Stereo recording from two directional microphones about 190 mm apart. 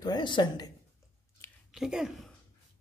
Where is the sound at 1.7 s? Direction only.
Centre (ahead or behind).